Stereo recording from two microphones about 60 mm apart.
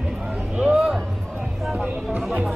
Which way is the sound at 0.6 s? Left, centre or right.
Centre.